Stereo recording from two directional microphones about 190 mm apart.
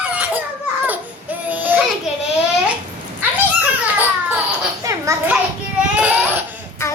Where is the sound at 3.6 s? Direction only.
10° right (ahead or behind).